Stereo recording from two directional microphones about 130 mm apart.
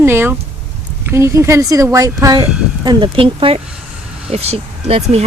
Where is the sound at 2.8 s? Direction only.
35° right (ahead or behind); by 5.2 s 55° right (ahead or behind).